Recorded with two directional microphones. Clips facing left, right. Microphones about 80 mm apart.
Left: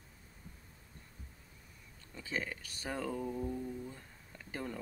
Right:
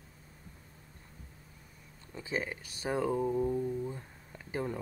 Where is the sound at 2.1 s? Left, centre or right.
Centre.